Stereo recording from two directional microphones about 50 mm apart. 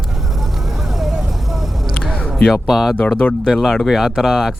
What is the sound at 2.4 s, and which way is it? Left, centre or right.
Speech, centre.